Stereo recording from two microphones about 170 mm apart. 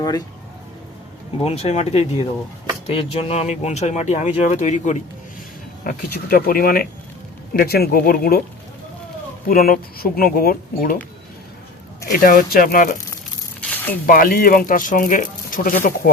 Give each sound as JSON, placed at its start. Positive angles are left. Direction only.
{"t": 1.5, "sound": "speech", "side_deg": 35}
{"t": 5.8, "sound": "speech", "side_deg": 60}
{"t": 9.5, "sound": "speech", "side_deg": 60}
{"t": 12.2, "sound": "speech", "side_deg": 55}
{"t": 13.6, "sound": "a sound", "side_deg": 10}
{"t": 14.1, "sound": "speech", "side_deg": 55}